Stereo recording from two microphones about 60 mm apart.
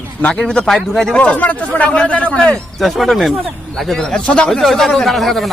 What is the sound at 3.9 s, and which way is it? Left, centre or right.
Speech, centre.